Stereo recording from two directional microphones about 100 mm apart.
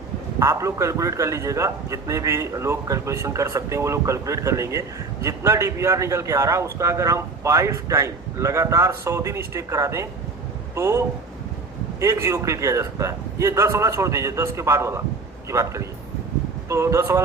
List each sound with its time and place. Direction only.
0.3 s a man's voice: 30° right (ahead or behind)